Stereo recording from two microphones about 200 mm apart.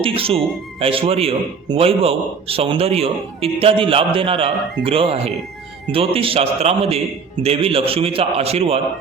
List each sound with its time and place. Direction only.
0.0 s a man's voice: 30° right (ahead or behind)